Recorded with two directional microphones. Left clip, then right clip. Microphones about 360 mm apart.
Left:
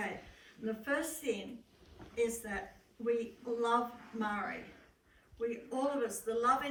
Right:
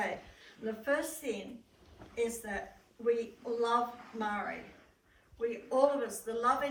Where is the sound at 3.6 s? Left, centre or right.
Centre.